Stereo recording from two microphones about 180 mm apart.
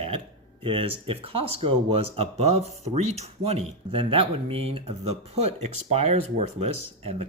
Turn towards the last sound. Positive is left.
turn(degrees=-35)  # may be behind; listen again after turning